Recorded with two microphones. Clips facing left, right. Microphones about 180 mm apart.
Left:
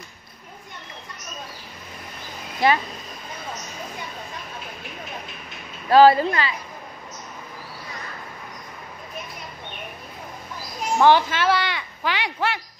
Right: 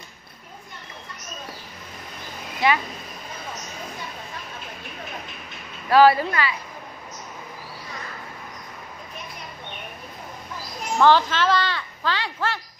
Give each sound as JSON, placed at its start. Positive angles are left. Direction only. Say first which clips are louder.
{"t": 2.6, "sound": "speech", "louder": "left 2 dB", "side_deg": 35}
{"t": 5.9, "sound": "speech", "louder": "left 2 dB", "side_deg": 25}
{"t": 11.0, "sound": "speech", "louder": "even", "side_deg": 15}